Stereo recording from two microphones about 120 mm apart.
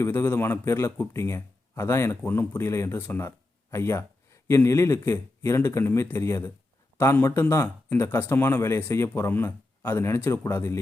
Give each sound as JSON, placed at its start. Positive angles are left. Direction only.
{"t": 0.0, "sound": "speech", "side_deg": 20}